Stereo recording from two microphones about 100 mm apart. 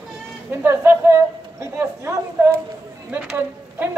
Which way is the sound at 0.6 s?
20° right (ahead or behind).